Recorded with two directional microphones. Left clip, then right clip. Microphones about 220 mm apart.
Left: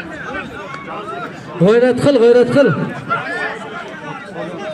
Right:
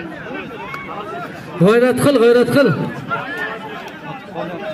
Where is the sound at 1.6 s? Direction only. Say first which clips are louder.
Left 1 dB; 50° right (ahead or behind).